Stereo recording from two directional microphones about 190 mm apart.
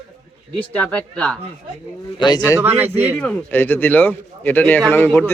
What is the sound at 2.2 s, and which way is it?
Speech, 20° left (ahead or behind).